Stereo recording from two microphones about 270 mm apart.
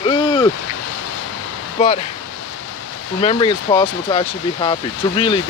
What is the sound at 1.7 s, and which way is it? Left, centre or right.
Speech, left.